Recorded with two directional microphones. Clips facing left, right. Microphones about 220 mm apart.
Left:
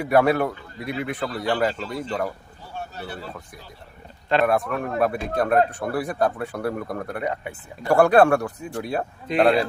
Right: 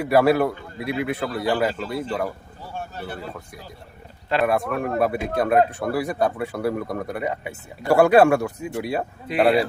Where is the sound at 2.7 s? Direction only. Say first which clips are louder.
Right 1 dB; 50° right (ahead or behind).